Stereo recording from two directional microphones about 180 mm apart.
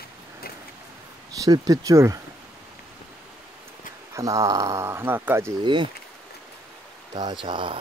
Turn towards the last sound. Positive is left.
turn(degrees=-25)  # may be behind; listen again after turning